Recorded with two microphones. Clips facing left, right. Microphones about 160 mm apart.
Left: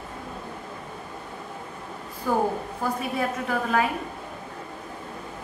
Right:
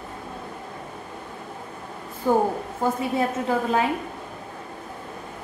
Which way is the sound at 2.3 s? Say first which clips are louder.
Right 3 dB; 25° right (ahead or behind).